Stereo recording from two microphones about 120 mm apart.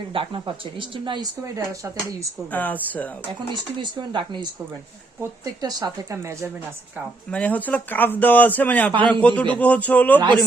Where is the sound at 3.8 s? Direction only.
40° right (ahead or behind).